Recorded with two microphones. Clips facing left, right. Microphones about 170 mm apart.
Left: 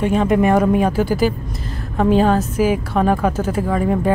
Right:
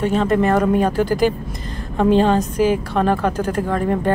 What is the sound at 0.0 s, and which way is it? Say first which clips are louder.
A woman's voice: left 1 dB; 10° left (ahead or behind).